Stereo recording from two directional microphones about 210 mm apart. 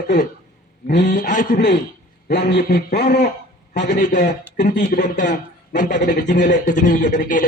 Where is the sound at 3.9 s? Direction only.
35° left (ahead or behind).